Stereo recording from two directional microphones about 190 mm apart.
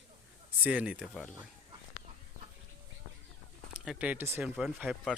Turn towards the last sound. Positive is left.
turn(degrees=-5)  # may be behind; listen again after turning